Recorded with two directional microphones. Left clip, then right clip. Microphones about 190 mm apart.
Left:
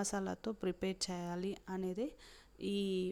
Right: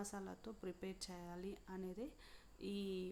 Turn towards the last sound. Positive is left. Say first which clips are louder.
# left 9 dB
turn(degrees=40)  # may be behind; listen again after turning